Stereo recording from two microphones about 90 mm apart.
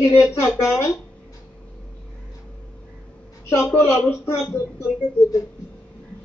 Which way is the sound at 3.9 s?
30° left (ahead or behind).